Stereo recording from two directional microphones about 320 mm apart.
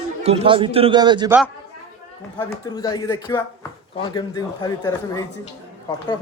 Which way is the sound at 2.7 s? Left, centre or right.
Centre.